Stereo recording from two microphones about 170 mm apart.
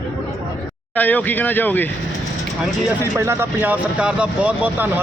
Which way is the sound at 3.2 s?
15° right (ahead or behind).